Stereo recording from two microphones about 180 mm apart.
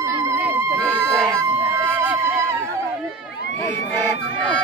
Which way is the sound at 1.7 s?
15° right (ahead or behind).